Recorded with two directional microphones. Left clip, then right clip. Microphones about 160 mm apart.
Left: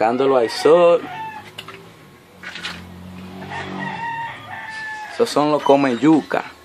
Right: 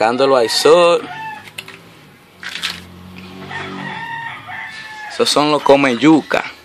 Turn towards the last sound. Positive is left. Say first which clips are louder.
# right 4 dB
turn(degrees=-10)  # may be behind; listen again after turning